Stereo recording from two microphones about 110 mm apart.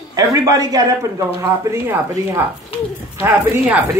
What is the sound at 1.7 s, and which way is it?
A woman's voice, 20° right (ahead or behind).